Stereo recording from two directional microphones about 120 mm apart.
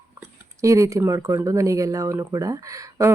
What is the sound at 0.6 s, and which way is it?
Speech, 25° right (ahead or behind).